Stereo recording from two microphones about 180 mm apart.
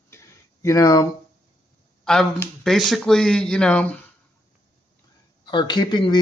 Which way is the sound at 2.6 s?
Centre (ahead or behind).